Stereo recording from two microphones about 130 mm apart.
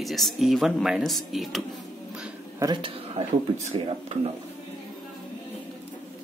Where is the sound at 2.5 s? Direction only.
30° right (ahead or behind).